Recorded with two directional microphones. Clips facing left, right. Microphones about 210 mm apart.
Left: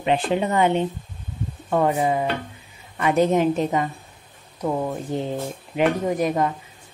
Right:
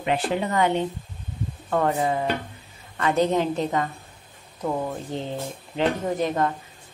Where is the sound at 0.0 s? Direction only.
20° left (ahead or behind).